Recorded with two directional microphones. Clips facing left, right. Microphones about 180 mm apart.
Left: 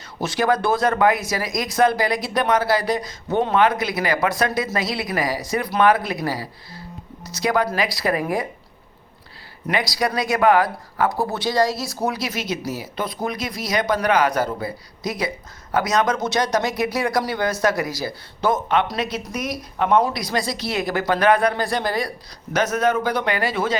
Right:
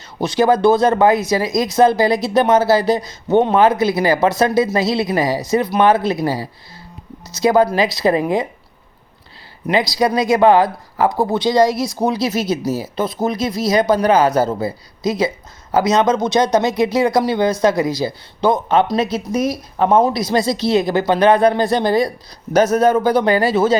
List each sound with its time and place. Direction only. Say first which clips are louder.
0.2 s speech: right 6 dB; 20° right (ahead or behind)
9.9 s a man's voice: right 7 dB; 25° right (ahead or behind)